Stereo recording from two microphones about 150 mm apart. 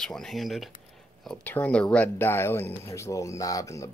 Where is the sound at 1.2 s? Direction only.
10° left (ahead or behind).